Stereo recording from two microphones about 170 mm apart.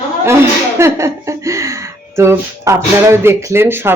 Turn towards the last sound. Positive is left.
turn(degrees=-15)  # may be behind; listen again after turning